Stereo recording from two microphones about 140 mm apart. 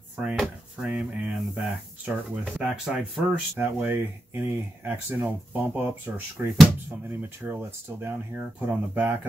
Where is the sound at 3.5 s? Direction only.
15° right (ahead or behind).